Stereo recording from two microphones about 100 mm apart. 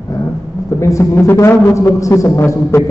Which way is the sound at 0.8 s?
30° left (ahead or behind).